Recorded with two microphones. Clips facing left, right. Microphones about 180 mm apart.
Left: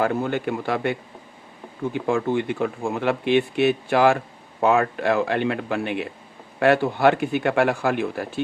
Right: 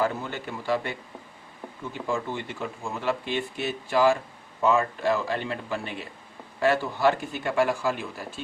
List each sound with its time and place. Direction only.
0.0 s speech: 55° left (ahead or behind)